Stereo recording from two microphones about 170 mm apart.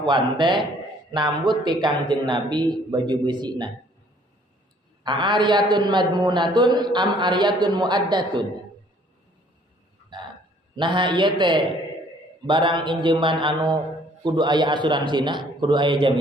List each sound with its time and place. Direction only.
0.3 s a man's voice: 25° right (ahead or behind)
5.0 s a man's voice: 25° right (ahead or behind)
10.8 s a man's voice: 30° right (ahead or behind)